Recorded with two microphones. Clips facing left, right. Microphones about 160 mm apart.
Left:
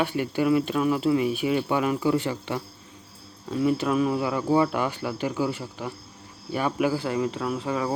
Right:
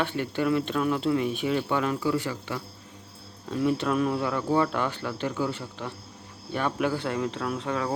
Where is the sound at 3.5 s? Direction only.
5° left (ahead or behind).